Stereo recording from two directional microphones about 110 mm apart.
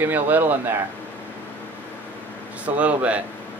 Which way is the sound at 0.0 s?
15° right (ahead or behind).